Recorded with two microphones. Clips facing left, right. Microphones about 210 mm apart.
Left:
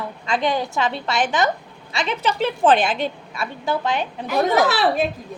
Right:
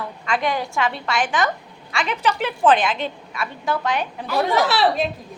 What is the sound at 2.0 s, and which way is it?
A woman's voice, 25° left (ahead or behind).